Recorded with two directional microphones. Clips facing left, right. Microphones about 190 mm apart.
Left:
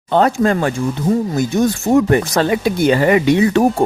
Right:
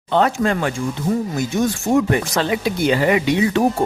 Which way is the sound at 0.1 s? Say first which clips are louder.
Left 3 dB; 40° left (ahead or behind).